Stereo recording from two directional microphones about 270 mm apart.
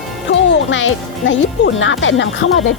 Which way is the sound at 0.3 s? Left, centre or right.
Left.